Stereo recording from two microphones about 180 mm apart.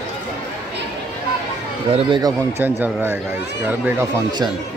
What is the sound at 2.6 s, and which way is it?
Speech, 10° right (ahead or behind).